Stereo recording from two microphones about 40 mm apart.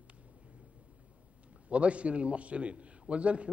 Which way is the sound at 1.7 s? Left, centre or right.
Right.